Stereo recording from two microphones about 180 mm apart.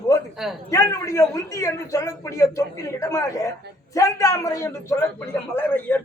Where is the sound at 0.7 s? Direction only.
15° left (ahead or behind).